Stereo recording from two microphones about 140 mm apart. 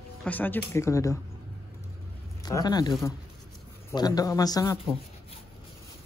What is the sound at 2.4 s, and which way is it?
Speech, 30° left (ahead or behind).